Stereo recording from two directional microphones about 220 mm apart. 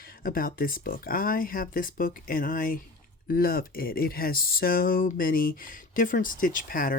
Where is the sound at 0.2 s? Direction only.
40° left (ahead or behind).